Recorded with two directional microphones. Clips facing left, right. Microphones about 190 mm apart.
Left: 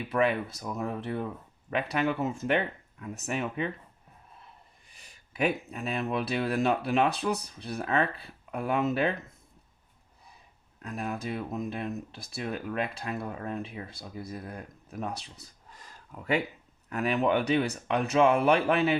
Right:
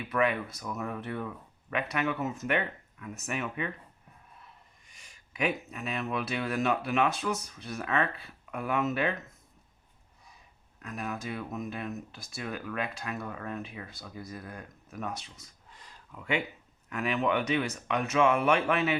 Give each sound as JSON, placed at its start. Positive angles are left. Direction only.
{"t": 0.1, "sound": "speech", "side_deg": 30}
{"t": 4.9, "sound": "speech", "side_deg": 35}
{"t": 10.8, "sound": "speech", "side_deg": 30}
{"t": 15.2, "sound": "a sound", "side_deg": 35}
{"t": 16.9, "sound": "speech", "side_deg": 35}